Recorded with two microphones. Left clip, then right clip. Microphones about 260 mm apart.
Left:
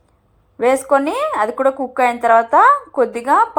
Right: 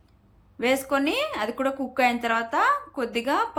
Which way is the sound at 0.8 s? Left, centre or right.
Left.